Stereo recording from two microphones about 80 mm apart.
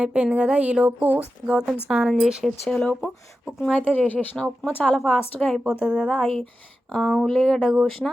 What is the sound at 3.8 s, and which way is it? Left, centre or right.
Speech, left.